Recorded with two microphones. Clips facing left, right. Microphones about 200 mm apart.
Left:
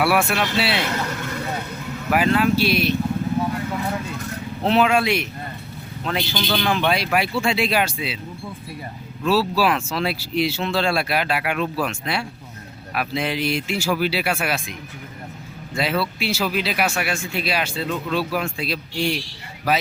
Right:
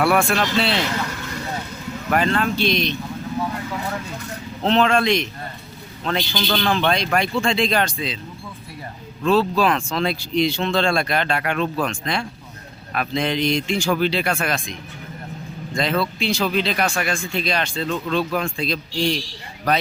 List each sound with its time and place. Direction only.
0.0 s speech: 5° left (ahead or behind)
2.0 s speech: 5° left (ahead or behind)
4.6 s speech: 10° left (ahead or behind)
9.2 s speech: 5° left (ahead or behind)